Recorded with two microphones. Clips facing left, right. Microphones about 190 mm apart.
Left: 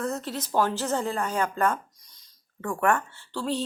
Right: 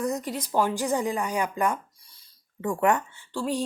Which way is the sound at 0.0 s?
15° right (ahead or behind).